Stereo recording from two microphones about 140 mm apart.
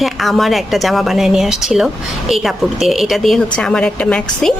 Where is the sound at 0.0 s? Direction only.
Centre (ahead or behind).